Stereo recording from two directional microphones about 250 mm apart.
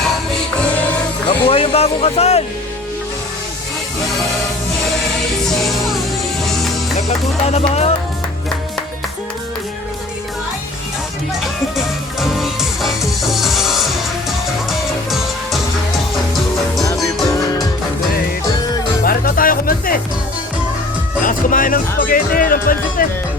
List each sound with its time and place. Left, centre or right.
1.3 s speech: left
5.4 s music: centre
7.4 s speech: left
11.8 s music: centre
19.0 s music: left
21.2 s speech: left